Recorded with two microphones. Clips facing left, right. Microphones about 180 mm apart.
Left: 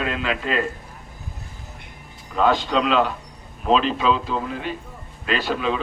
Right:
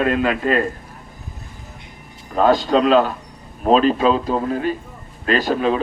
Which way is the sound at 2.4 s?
40° right (ahead or behind).